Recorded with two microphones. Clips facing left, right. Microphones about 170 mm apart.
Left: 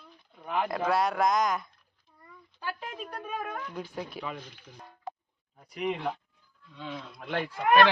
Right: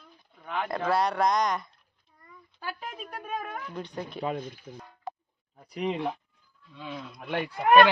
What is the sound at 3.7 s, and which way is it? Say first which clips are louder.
Speech: right 1 dB; 5° left (ahead or behind).